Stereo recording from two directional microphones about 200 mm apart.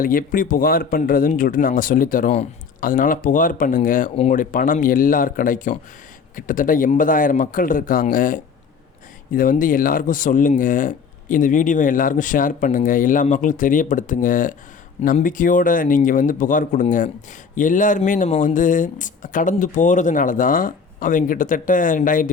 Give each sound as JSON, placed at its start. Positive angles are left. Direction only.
{"t": 0.0, "sound": "speech", "side_deg": 45}